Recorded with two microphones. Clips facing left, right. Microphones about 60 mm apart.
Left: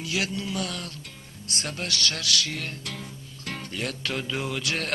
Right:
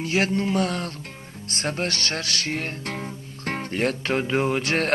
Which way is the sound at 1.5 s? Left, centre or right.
Right.